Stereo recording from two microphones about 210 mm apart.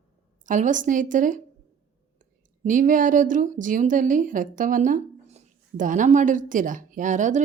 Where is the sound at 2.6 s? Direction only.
40° right (ahead or behind).